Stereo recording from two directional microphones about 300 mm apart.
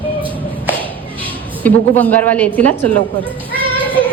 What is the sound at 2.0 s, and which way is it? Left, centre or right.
Speech, centre.